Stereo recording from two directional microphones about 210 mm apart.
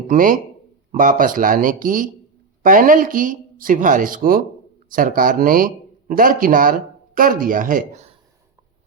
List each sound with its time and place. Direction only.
0.1 s speech: 40° right (ahead or behind)